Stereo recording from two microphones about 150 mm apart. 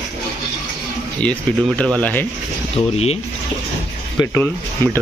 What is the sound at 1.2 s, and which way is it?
Speech, 10° left (ahead or behind).